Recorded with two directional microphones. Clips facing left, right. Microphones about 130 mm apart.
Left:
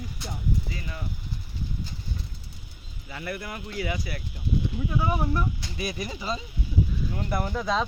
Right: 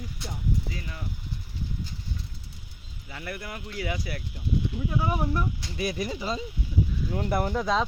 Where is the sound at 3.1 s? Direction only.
15° right (ahead or behind).